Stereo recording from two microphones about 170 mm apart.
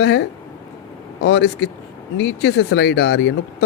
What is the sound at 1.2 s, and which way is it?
Speech, 90° left.